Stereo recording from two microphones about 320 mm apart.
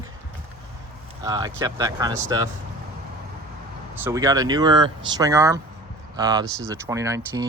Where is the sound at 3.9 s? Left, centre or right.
Centre.